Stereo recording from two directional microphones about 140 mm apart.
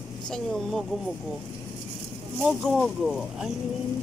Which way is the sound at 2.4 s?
Centre (ahead or behind).